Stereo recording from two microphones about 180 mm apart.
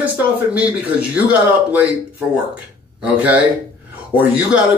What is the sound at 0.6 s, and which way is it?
Speech, 5° right (ahead or behind).